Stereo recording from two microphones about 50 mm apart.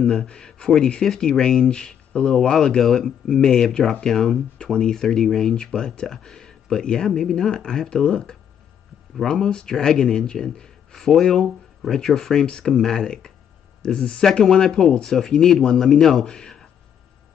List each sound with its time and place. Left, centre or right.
0.0 s a man's voice: centre